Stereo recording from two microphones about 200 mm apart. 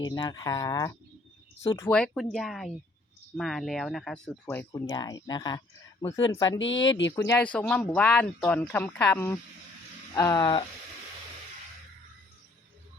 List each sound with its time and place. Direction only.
0.2 s speech: 20° left (ahead or behind)
6.8 s speech: 65° left (ahead or behind)
7.2 s speech: 10° left (ahead or behind)